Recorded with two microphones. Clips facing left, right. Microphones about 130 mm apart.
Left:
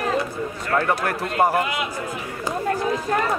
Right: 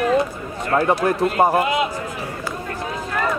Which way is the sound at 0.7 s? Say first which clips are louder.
Right 4 dB; 15° right (ahead or behind).